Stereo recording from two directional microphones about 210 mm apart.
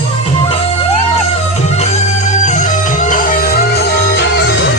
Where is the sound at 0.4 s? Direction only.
30° left (ahead or behind).